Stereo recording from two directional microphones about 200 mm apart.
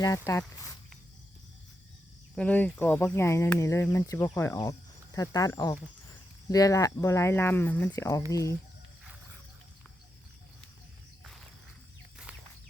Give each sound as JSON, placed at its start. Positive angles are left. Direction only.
{"t": 0.0, "sound": "speech", "side_deg": 15}
{"t": 2.3, "sound": "speech", "side_deg": 5}